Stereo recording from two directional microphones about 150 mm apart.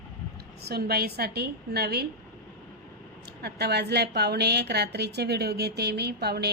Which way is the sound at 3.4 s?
90° right.